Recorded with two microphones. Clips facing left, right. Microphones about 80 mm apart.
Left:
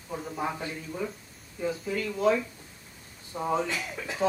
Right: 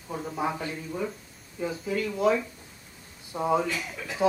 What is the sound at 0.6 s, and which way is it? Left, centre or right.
Speech, centre.